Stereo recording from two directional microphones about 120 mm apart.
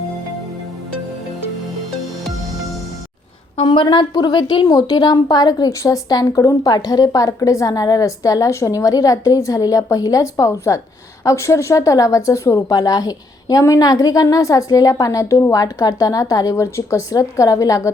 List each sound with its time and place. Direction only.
3.6 s a woman's voice: 40° left (ahead or behind)